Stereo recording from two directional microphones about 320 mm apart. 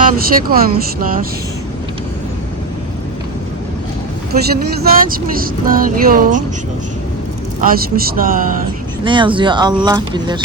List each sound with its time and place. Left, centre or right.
0.0 s speech: right
4.8 s speech: right
7.6 s speech: right
9.0 s speech: centre